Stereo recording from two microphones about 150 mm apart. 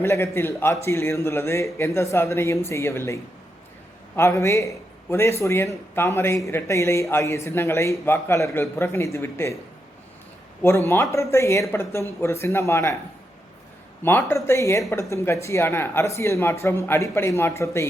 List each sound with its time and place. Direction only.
0.0 s a man's voice: 15° left (ahead or behind)
10.6 s a man's voice: 15° left (ahead or behind)
14.0 s speech: 15° left (ahead or behind)